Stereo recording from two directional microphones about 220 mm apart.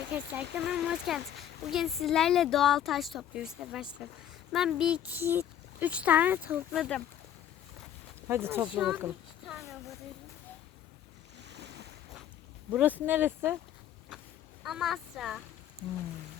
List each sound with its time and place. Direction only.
0.1 s speech: 10° right (ahead or behind)
8.3 s speech: 10° right (ahead or behind)
11.4 s waves: 50° right (ahead or behind)
12.7 s speech: 5° right (ahead or behind)
14.6 s a woman's voice: centre (ahead or behind)